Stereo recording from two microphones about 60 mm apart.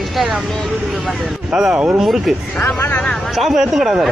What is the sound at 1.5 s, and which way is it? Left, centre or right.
Speech, centre.